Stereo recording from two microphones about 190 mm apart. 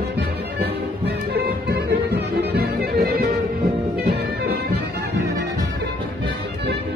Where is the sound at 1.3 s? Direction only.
55° right (ahead or behind).